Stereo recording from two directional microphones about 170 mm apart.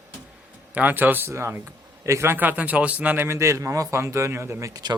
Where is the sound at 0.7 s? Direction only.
10° right (ahead or behind).